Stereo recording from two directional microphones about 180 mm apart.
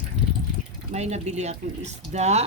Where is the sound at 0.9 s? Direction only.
40° right (ahead or behind).